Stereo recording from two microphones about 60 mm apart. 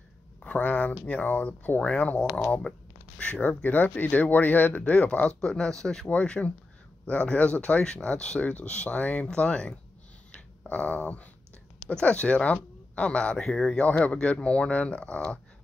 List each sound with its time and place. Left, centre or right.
0.4 s speech: left
1.8 s speech: centre
5.4 s speech: centre
6.0 s speech: left
13.4 s speech: centre
13.7 s speech: left